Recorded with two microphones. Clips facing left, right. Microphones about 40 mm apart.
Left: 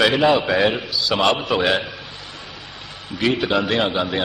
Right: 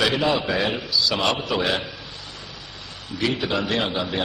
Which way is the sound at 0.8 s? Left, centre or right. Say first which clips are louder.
Even; left.